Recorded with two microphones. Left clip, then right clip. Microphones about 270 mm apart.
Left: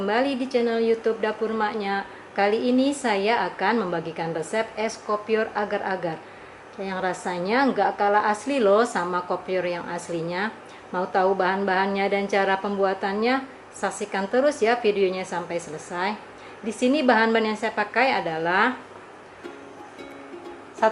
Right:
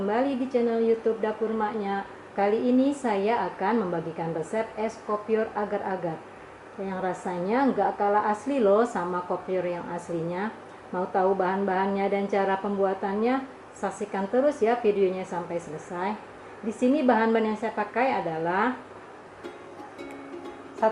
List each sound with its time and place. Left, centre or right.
0.1 s a woman's voice: centre